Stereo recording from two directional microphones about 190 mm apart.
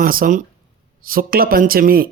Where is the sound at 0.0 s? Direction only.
50° right (ahead or behind).